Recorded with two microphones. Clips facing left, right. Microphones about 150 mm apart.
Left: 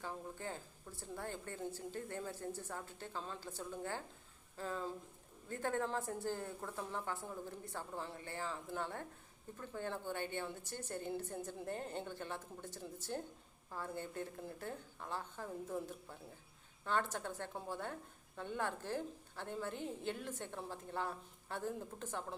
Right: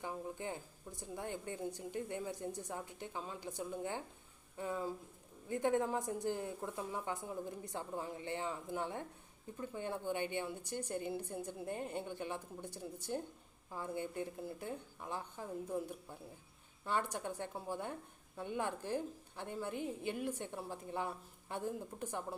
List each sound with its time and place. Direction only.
0.0 s a woman's voice: 15° right (ahead or behind)